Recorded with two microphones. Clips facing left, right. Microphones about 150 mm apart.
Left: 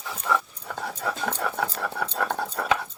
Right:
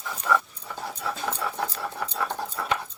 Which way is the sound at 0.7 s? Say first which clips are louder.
Left 2 dB; 65° left (ahead or behind).